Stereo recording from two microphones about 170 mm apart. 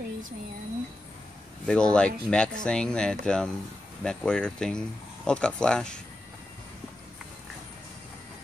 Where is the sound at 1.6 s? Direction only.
5° left (ahead or behind).